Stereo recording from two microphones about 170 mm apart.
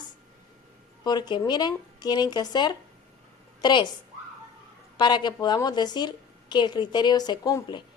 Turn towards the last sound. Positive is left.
turn(degrees=20)  # may be behind; listen again after turning